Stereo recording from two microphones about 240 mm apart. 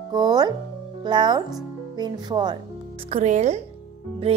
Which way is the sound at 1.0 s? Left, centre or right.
Centre.